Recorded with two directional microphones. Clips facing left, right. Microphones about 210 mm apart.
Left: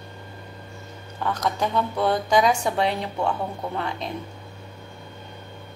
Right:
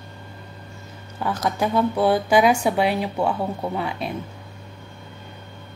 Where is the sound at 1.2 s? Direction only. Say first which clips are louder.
Right 2 dB; 10° right (ahead or behind).